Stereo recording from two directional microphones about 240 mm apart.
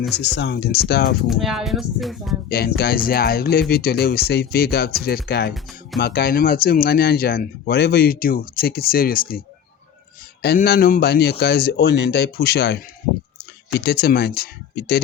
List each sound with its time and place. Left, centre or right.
0.1 s speech: left
1.3 s speech: centre
2.5 s speech: left
10.4 s speech: left